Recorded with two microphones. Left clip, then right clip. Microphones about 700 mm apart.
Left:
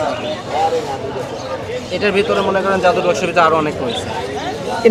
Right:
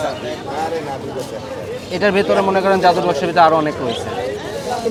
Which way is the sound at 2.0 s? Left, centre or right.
Centre.